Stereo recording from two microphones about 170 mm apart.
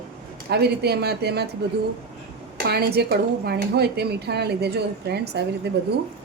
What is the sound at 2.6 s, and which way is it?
Speech, 65° right (ahead or behind).